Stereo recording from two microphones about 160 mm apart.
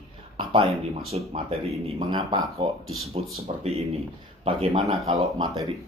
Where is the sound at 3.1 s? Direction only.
40° right (ahead or behind).